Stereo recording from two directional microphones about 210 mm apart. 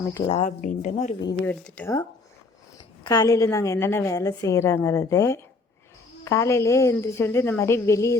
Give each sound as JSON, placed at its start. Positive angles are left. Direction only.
{"t": 0.1, "sound": "speech", "side_deg": 25}
{"t": 1.5, "sound": "a woman's voice", "side_deg": 5}
{"t": 3.0, "sound": "a woman's voice", "side_deg": 15}